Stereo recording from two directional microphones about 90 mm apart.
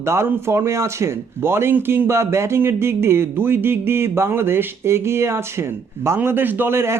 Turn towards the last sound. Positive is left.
turn(degrees=-25)  # may be behind; listen again after turning